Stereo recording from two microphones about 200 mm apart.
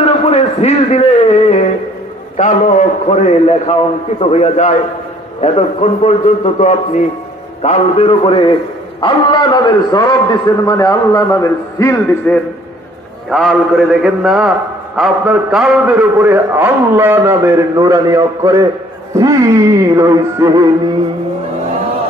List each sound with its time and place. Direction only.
0.0 s a man's voice: 30° left (ahead or behind); by 12.4 s 15° left (ahead or behind)
13.3 s a man's voice: centre (ahead or behind); by 20.7 s 15° right (ahead or behind)